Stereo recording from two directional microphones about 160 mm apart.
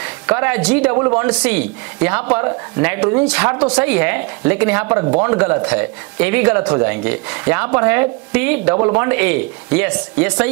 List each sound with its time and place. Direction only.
0.0 s speech: 10° right (ahead or behind)
0.9 s speech: 20° right (ahead or behind)
1.2 s speech: 10° right (ahead or behind)